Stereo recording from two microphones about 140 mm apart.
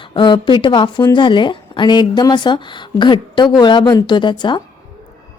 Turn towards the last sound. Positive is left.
turn(degrees=35)  # may be behind; listen again after turning